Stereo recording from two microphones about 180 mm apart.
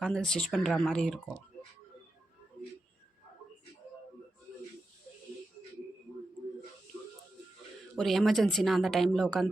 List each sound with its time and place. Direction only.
0.0 s speech: 5° left (ahead or behind)
7.9 s speech: centre (ahead or behind)